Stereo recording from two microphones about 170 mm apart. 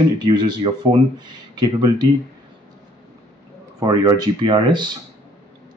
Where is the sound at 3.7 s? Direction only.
20° right (ahead or behind).